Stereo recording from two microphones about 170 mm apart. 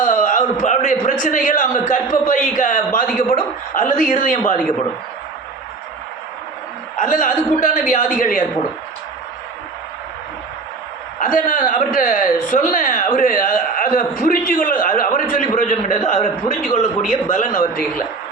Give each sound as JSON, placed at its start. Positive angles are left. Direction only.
{"t": 0.0, "sound": "a man's voice", "side_deg": 50}
{"t": 7.0, "sound": "a man's voice", "side_deg": 50}
{"t": 11.2, "sound": "a man's voice", "side_deg": 50}